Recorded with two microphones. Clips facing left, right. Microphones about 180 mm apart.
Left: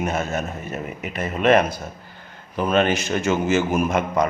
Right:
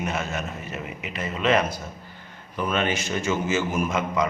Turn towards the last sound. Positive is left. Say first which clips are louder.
# left 4 dB
turn(degrees=55)  # may be behind; listen again after turning